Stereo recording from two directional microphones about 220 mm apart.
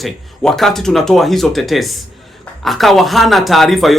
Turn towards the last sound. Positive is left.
turn(degrees=0)  # may be behind; listen again after turning